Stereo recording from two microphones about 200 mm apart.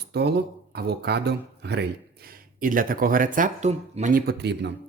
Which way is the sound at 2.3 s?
45° right (ahead or behind).